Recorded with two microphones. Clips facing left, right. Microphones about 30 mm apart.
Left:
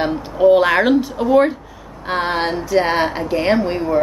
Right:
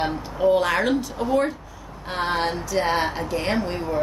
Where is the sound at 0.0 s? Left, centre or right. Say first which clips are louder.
Left 7 dB; left.